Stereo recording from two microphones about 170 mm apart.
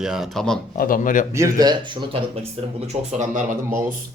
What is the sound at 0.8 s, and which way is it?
Speech, 55° left (ahead or behind).